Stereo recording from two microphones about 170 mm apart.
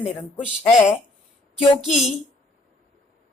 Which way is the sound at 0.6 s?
15° left (ahead or behind).